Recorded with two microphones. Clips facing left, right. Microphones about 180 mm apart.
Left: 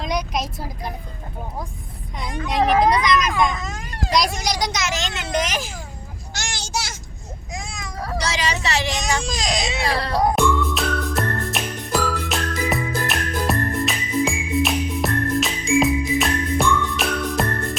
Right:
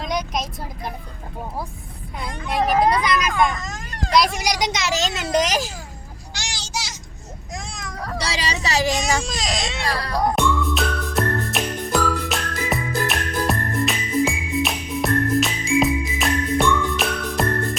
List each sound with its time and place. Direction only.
0.0 s vehicle: centre (ahead or behind)
2.1 s speech: 5° right (ahead or behind); by 4.9 s 20° right (ahead or behind)
4.9 s speech: 40° right (ahead or behind)
6.3 s a sound: 50° left (ahead or behind)
7.5 s a sound: centre (ahead or behind)
8.3 s speech: 35° right (ahead or behind)
9.0 s speech: 5° right (ahead or behind)
10.2 s music: centre (ahead or behind)